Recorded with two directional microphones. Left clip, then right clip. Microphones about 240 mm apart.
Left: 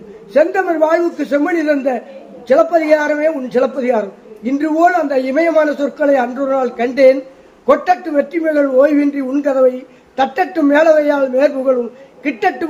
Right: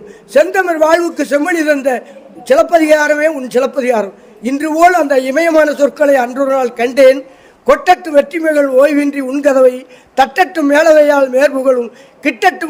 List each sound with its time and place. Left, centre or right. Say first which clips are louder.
0.3 s a man's voice: right 3 dB; right